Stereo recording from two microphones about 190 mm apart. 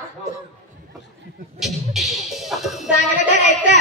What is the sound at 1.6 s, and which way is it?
Music, centre (ahead or behind).